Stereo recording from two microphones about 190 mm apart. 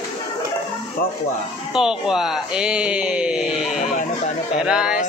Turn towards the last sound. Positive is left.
turn(degrees=-5)  # may be behind; listen again after turning